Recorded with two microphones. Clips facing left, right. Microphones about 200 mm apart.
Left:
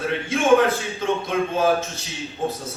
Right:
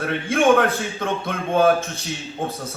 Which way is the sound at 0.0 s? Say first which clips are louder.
Right 3 dB; 55° right (ahead or behind).